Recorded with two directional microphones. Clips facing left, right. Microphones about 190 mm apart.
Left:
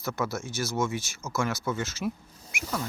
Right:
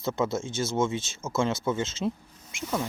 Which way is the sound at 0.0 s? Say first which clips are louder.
Right 4 dB; 25° right (ahead or behind).